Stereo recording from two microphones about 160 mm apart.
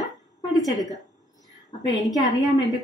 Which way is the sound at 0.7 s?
25° left (ahead or behind).